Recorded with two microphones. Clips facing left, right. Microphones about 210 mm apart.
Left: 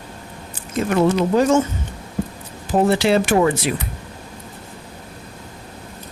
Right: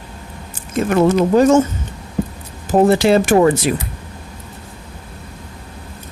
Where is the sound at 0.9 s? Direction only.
45° right (ahead or behind).